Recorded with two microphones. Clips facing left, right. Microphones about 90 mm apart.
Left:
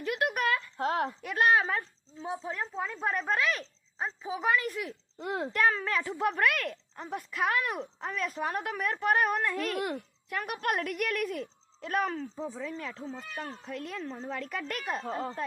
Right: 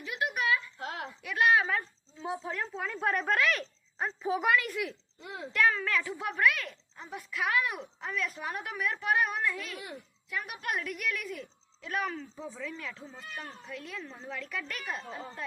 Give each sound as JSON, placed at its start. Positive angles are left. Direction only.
{"t": 0.0, "sound": "a sound", "side_deg": 50}
{"t": 2.4, "sound": "speech", "side_deg": 30}
{"t": 3.1, "sound": "speech", "side_deg": 0}
{"t": 4.4, "sound": "speech", "side_deg": 35}
{"t": 5.2, "sound": "speech", "side_deg": 55}
{"t": 5.5, "sound": "a child's voice", "side_deg": 35}
{"t": 15.0, "sound": "speech", "side_deg": 65}